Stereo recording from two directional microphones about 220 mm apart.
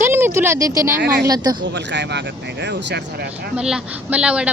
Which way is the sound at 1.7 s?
55° right (ahead or behind).